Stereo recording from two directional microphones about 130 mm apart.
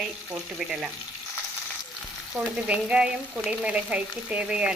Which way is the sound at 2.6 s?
10° right (ahead or behind).